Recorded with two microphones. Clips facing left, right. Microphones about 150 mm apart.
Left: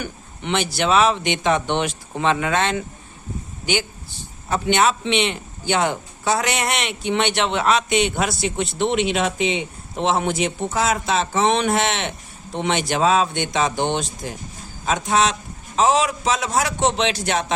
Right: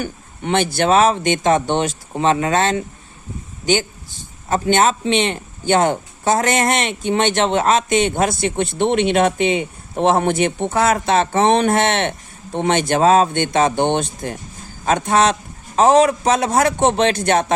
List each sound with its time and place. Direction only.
0.0 s a man's voice: 50° right (ahead or behind)
4.4 s a man's voice: 45° right (ahead or behind)